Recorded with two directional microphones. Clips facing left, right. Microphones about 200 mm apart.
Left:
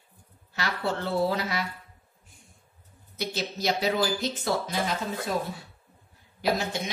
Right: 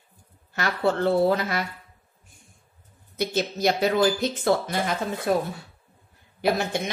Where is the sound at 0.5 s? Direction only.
50° right (ahead or behind).